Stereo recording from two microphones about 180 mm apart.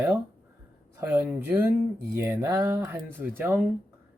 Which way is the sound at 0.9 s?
10° right (ahead or behind).